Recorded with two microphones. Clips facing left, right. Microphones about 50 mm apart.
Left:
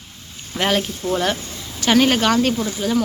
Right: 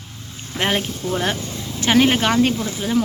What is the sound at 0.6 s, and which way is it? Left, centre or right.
Speech, right.